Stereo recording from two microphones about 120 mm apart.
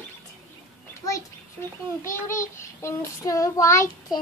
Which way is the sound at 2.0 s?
25° left (ahead or behind).